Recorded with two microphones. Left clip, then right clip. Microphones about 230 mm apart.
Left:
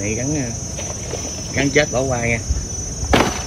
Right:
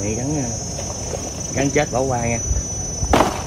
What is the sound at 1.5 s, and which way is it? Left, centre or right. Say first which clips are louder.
Cricket: left 2 dB; centre.